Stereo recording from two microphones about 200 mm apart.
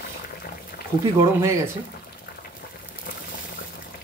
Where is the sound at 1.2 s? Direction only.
15° right (ahead or behind).